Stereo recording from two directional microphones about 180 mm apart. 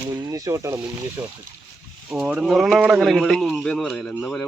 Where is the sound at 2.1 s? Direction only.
5° right (ahead or behind).